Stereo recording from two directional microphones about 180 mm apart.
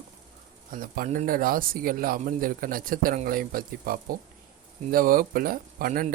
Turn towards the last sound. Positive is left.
turn(degrees=-50)  # may be behind; listen again after turning